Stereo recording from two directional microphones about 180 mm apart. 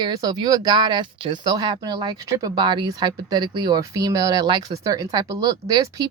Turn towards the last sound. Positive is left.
turn(degrees=-20)  # may be behind; listen again after turning